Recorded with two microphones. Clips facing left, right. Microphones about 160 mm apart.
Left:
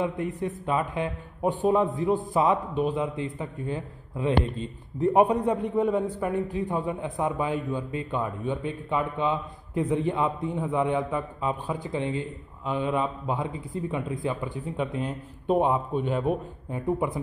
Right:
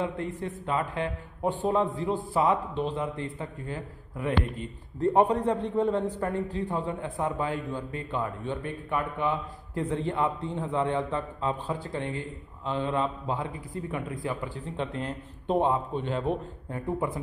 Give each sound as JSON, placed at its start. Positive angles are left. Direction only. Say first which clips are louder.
{"t": 0.0, "sound": "a man's voice", "louder": "left 3 dB", "side_deg": 15}